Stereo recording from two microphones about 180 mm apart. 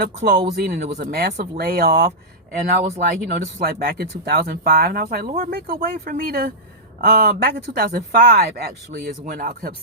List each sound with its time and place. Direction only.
0.0 s speech: 65° right (ahead or behind)